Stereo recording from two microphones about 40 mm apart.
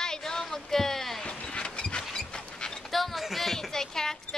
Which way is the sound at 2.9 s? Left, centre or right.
Centre.